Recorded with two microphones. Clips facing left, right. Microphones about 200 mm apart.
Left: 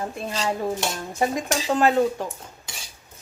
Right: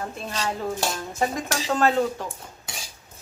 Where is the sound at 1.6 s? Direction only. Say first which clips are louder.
Left 2 dB; 10° left (ahead or behind).